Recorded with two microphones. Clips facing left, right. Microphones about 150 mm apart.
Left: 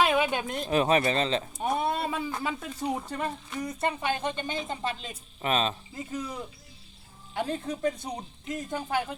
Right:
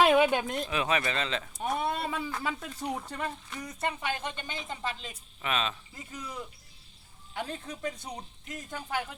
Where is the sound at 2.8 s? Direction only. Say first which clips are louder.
Left 7 dB; 10° left (ahead or behind).